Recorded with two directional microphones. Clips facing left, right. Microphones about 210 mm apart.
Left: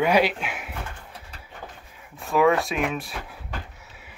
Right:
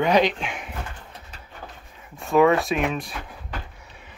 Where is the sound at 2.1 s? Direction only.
Centre (ahead or behind).